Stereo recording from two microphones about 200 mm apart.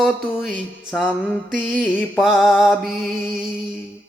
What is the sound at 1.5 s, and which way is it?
Mantra, centre (ahead or behind).